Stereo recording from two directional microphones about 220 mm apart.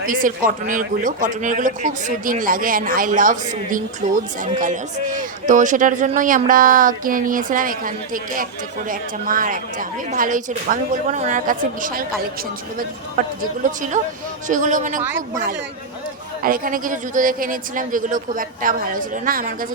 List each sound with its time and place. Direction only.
0.0 s a man's voice: 40° right (ahead or behind)
13.2 s a man's voice: 40° right (ahead or behind)
16.4 s a man's voice: 40° right (ahead or behind)